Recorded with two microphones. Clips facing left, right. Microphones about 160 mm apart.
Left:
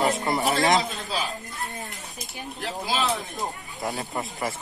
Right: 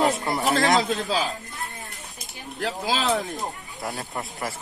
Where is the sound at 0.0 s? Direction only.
Centre (ahead or behind).